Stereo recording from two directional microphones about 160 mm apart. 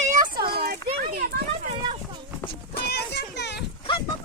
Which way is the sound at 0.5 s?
75° right (ahead or behind).